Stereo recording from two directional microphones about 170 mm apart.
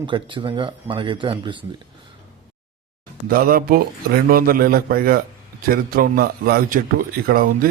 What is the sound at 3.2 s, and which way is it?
A man's voice, 60° right (ahead or behind).